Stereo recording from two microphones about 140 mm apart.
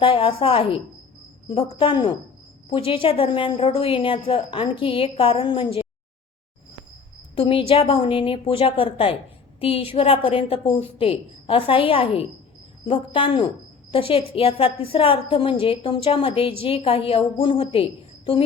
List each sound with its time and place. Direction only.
0.0 s a woman's voice: 40° left (ahead or behind)
7.3 s a woman's voice: 40° left (ahead or behind)